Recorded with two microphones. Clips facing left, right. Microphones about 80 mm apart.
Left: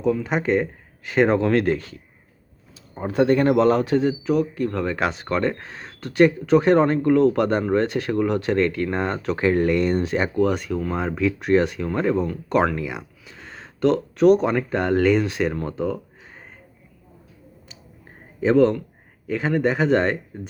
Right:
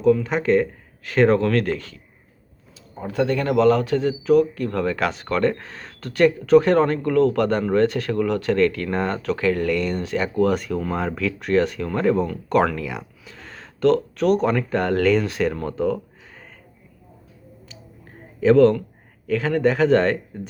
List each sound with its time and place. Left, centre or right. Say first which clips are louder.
0.0 s speech: right 3 dB; centre
2.9 s a man's voice: left 3 dB; left
4.3 s speech: right 4 dB; centre
10.3 s speech: right 1 dB; centre
18.3 s speech: right 3 dB; centre